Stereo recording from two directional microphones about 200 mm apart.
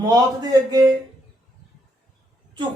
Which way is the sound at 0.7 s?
20° right (ahead or behind).